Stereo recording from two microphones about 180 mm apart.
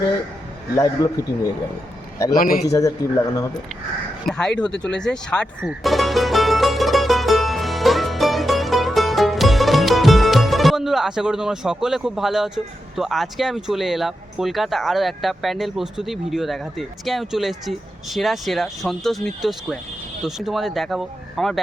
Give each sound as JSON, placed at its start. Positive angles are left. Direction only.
{"t": 1.0, "sound": "a man's voice", "side_deg": 20}
{"t": 2.4, "sound": "a man's voice", "side_deg": 50}
{"t": 2.6, "sound": "a man's voice", "side_deg": 20}
{"t": 4.3, "sound": "speech", "side_deg": 5}
{"t": 5.6, "sound": "music", "side_deg": 0}
{"t": 13.0, "sound": "speech", "side_deg": 0}